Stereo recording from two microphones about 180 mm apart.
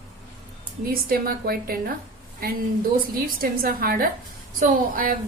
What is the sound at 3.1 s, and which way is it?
A woman's voice, 55° right (ahead or behind).